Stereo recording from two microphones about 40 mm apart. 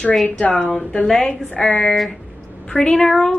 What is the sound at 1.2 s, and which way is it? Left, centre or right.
Speech, centre.